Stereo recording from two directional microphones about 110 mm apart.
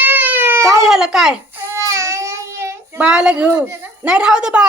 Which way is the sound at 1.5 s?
25° right (ahead or behind).